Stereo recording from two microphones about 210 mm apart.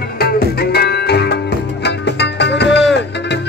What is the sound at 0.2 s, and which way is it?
Music, 45° left (ahead or behind).